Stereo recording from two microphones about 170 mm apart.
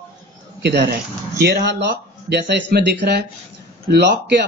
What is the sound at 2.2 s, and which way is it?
Speech, 80° right.